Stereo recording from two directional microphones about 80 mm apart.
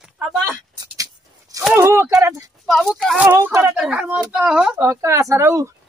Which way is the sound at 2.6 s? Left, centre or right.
Centre.